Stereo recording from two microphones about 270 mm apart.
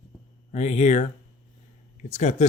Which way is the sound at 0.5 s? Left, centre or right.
Left.